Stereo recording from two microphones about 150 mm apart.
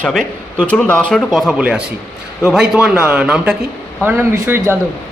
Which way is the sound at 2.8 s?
10° right (ahead or behind).